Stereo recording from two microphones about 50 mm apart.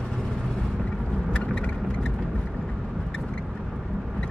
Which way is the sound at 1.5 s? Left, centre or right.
Left.